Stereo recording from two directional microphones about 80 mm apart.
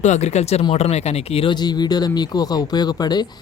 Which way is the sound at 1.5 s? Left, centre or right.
Left.